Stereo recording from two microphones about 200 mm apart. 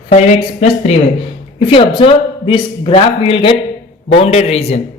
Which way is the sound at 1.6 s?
25° left (ahead or behind).